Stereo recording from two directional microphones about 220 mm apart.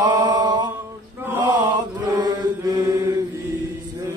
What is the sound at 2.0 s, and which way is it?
Chant, 20° right (ahead or behind).